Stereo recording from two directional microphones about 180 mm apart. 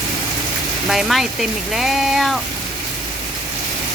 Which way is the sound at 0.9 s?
Centre (ahead or behind).